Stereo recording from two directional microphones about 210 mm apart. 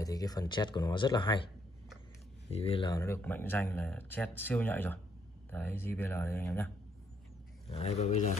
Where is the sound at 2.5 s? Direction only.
30° left (ahead or behind); by 6.7 s 10° left (ahead or behind).